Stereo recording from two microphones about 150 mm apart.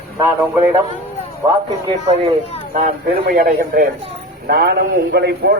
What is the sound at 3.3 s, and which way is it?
Speech, 80° right.